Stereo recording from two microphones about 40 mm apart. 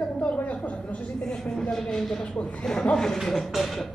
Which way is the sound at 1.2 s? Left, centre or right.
Centre.